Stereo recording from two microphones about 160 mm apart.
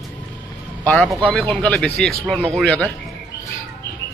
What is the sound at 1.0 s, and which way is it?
A man's voice, 5° left (ahead or behind).